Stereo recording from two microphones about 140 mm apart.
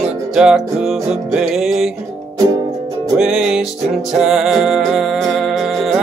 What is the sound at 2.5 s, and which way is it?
Music, 25° right (ahead or behind).